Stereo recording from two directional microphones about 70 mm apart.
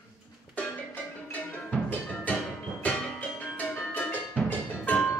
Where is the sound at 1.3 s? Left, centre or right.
Left.